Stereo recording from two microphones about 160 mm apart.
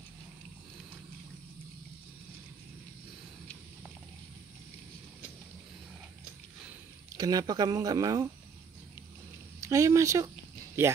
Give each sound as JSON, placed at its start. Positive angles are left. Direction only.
{"t": 7.2, "sound": "speech", "side_deg": -25}
{"t": 9.6, "sound": "speech", "side_deg": -20}